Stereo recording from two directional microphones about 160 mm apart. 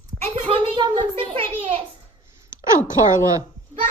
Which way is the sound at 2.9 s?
20° right (ahead or behind).